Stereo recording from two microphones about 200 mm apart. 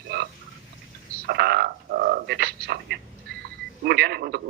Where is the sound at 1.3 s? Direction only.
50° right (ahead or behind).